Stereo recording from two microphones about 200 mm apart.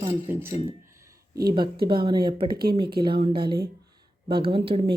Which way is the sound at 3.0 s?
25° right (ahead or behind).